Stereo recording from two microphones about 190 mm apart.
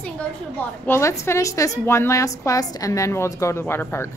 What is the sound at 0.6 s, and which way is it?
A woman's voice, 10° left (ahead or behind).